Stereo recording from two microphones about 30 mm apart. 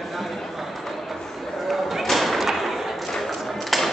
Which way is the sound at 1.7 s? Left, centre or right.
Centre.